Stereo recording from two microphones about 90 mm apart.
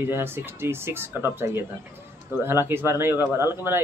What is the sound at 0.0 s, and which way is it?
Speech, 25° right (ahead or behind).